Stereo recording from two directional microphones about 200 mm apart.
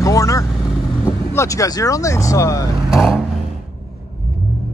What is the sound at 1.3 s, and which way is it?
Speech, 15° left (ahead or behind).